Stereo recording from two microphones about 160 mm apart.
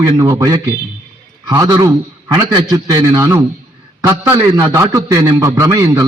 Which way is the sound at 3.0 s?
15° right (ahead or behind).